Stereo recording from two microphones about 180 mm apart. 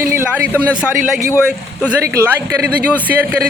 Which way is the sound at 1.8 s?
10° right (ahead or behind).